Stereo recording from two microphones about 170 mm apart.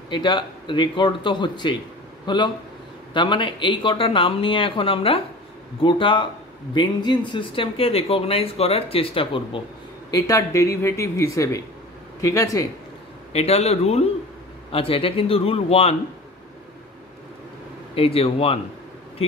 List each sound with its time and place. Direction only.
0.1 s speech: 30° left (ahead or behind)
10.1 s speech: 20° left (ahead or behind)
13.3 s speech: 40° left (ahead or behind)
17.9 s speech: 35° left (ahead or behind)